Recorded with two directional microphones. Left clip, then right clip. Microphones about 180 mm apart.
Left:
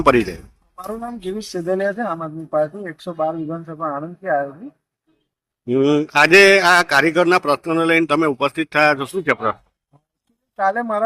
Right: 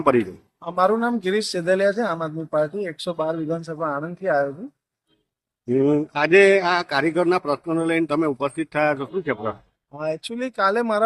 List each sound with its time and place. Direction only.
0.0 s speech: centre (ahead or behind)
0.9 s speech: 25° right (ahead or behind)
5.6 s speech: centre (ahead or behind)
10.5 s speech: 25° right (ahead or behind)